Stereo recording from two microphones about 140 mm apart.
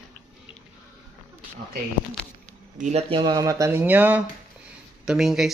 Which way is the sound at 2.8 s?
50° right (ahead or behind).